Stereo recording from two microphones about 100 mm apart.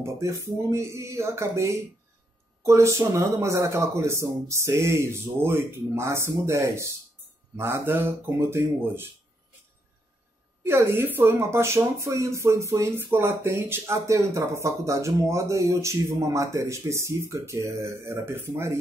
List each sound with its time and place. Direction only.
0.0 s speech: 30° right (ahead or behind)
10.6 s speech: 25° right (ahead or behind)